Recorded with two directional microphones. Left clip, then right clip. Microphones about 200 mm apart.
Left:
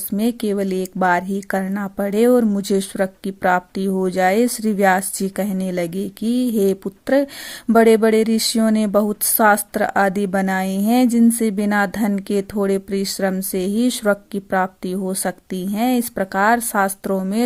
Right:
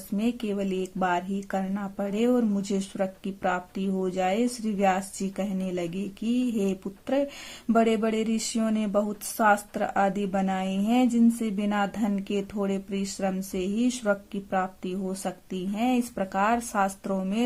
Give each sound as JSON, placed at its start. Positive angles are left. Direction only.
{"t": 0.2, "sound": "speech", "side_deg": 35}